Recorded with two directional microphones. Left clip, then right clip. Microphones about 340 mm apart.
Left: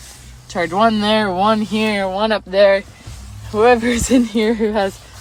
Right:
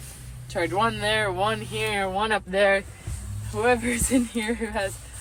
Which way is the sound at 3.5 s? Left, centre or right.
Left.